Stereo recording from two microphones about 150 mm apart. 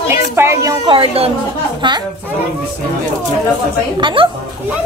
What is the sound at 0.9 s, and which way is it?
Speech, 40° right (ahead or behind).